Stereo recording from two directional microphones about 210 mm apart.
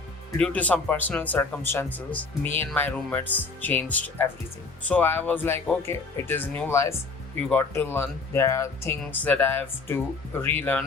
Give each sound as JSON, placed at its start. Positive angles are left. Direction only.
{"t": 0.3, "sound": "speech", "side_deg": 5}